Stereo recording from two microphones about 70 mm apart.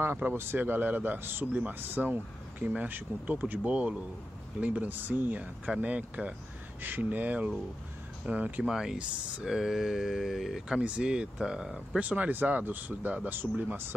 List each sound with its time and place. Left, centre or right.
0.0 s speech: right
8.6 s speech: centre
10.8 s speech: centre
12.0 s speech: right